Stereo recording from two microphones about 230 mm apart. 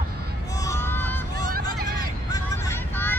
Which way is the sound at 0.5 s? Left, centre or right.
Centre.